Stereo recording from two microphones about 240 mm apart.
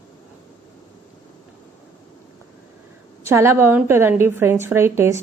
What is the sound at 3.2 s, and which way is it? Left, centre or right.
A woman's voice, centre.